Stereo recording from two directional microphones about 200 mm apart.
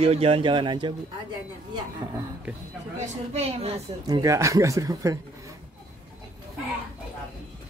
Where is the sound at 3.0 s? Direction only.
30° right (ahead or behind).